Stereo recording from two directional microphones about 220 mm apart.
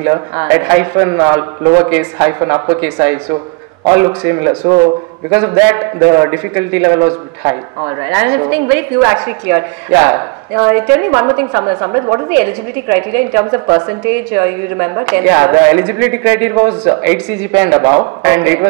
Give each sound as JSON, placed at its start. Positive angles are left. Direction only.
{"t": 0.1, "sound": "a woman's voice", "side_deg": -15}